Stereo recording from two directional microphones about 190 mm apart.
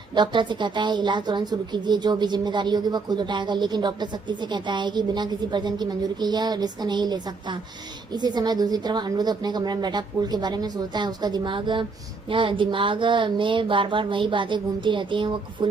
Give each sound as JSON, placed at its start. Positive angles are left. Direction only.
{"t": 0.1, "sound": "a woman's voice", "side_deg": -25}